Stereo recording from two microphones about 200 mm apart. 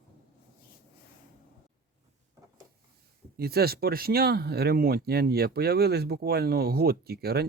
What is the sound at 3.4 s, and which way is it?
Speech, 50° right (ahead or behind).